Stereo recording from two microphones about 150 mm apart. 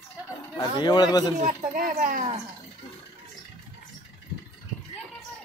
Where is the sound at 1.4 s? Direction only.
60° right (ahead or behind).